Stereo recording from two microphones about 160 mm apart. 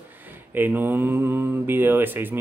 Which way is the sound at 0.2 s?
10° right (ahead or behind).